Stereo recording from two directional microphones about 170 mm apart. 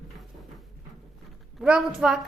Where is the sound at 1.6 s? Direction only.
5° right (ahead or behind).